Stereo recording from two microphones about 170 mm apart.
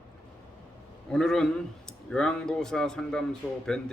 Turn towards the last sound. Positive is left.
turn(degrees=5)  # may be behind; listen again after turning